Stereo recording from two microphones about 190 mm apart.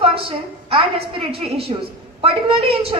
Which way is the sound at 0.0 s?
30° right (ahead or behind).